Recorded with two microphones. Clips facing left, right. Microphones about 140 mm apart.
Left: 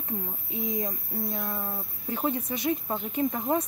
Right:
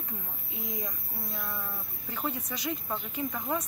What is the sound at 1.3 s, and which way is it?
Speech, 35° left (ahead or behind).